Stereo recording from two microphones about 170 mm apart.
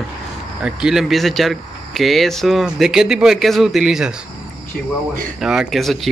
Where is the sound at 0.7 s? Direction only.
5° right (ahead or behind).